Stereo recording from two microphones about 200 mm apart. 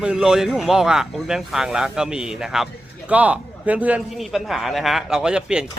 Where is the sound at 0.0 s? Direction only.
5° right (ahead or behind).